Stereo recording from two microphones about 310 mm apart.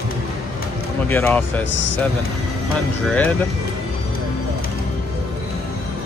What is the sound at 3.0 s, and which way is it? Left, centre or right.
Speech, centre.